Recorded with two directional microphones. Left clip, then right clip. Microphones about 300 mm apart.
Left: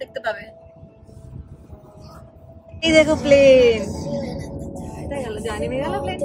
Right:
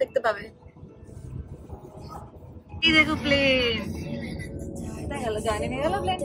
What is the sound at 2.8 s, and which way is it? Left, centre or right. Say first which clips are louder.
Speech: left 5 dB; centre.